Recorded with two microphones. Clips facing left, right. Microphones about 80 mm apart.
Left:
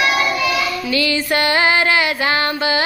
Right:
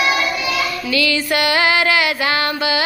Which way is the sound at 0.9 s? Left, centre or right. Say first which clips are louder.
Right 1 dB; left.